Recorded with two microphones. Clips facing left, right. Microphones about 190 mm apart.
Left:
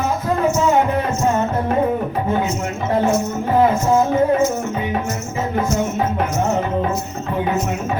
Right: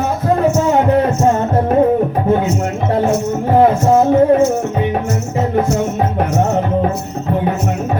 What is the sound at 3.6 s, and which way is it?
Music, 65° right (ahead or behind).